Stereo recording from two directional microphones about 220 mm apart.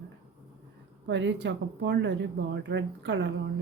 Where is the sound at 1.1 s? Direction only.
55° right (ahead or behind).